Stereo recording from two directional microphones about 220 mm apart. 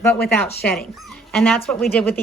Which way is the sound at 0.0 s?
5° left (ahead or behind).